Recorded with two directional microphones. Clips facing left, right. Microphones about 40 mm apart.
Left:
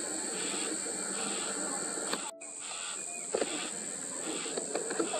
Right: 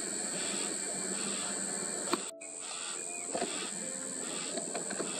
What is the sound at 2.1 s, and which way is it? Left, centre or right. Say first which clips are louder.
Crow: right 3 dB; centre.